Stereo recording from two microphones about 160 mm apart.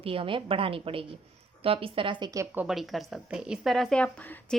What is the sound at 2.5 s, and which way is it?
A woman's voice, centre (ahead or behind).